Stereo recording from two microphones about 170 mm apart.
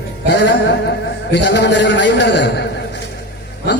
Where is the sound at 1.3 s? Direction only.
90° left.